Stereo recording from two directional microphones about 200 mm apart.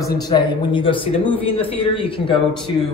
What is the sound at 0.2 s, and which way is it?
Speech, 20° left (ahead or behind).